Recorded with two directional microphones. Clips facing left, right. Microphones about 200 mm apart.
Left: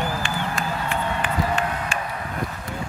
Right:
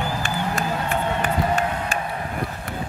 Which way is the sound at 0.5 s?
40° right (ahead or behind).